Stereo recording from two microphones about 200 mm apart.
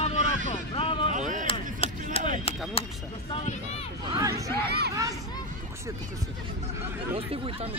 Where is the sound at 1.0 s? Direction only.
40° right (ahead or behind).